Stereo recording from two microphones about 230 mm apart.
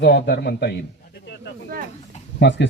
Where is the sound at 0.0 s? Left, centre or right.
Left.